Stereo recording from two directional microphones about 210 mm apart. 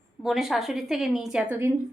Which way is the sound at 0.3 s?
Centre (ahead or behind).